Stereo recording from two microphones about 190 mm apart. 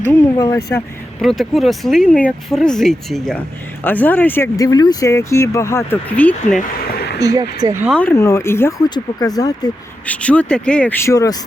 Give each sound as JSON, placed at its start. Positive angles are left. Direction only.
{"t": 0.1, "sound": "speech", "side_deg": 15}
{"t": 1.2, "sound": "speech", "side_deg": 0}
{"t": 7.2, "sound": "speech", "side_deg": -20}
{"t": 7.9, "sound": "speech", "side_deg": 5}
{"t": 10.1, "sound": "speech", "side_deg": 5}